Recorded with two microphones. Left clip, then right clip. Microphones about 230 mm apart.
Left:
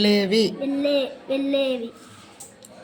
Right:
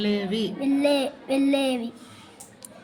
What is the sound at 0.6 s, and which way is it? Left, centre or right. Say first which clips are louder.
A woman's voice: even; right.